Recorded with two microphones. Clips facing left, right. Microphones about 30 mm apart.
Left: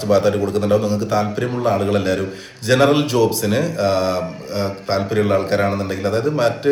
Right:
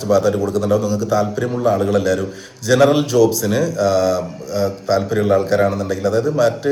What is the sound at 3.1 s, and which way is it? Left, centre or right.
Mantra, left.